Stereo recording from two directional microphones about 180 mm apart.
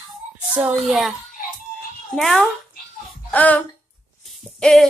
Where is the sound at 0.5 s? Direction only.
5° right (ahead or behind).